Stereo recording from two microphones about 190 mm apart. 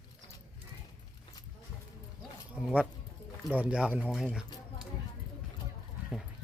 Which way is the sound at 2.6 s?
5° right (ahead or behind).